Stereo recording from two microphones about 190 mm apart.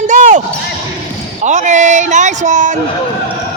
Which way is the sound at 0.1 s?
40° right (ahead or behind).